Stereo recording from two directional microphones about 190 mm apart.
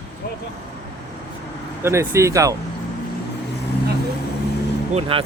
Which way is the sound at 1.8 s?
15° right (ahead or behind).